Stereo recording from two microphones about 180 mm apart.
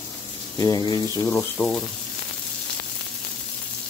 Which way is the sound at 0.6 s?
20° left (ahead or behind).